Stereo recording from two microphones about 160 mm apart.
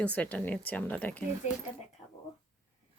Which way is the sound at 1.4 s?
50° left (ahead or behind).